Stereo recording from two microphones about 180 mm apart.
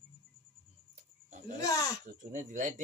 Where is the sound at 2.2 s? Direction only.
45° right (ahead or behind).